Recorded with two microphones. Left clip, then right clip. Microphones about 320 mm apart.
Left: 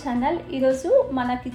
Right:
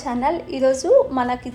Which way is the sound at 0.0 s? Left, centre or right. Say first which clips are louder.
Right 3 dB; centre.